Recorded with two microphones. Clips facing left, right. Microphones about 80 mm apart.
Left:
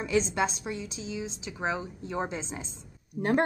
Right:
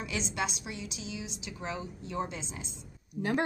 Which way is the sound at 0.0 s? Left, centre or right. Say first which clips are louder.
Left 7 dB; left.